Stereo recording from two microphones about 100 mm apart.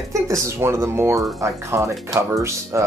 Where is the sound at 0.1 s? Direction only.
30° right (ahead or behind).